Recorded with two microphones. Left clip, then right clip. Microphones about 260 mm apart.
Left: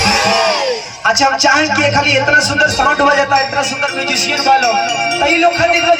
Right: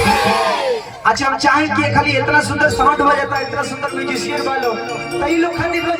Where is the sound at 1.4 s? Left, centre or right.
Centre.